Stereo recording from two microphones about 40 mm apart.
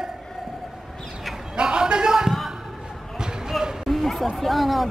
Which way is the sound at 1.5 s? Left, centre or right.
Right.